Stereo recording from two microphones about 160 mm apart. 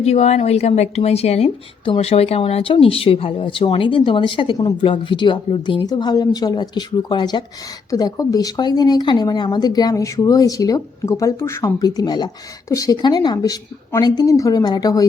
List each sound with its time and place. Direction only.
0.0 s a woman's voice: 40° left (ahead or behind); by 15.0 s 25° left (ahead or behind)